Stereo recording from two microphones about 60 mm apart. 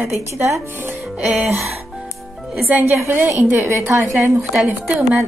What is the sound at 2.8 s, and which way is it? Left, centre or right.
A woman's voice, right.